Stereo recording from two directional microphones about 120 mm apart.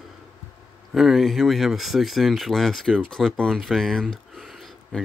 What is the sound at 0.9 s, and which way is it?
Speech, centre (ahead or behind).